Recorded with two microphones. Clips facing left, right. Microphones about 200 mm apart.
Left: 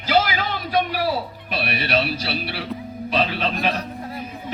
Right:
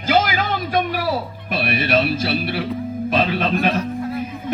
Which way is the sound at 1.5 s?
50° right (ahead or behind).